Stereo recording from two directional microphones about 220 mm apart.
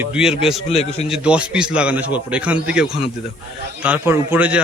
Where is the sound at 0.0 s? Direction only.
5° right (ahead or behind).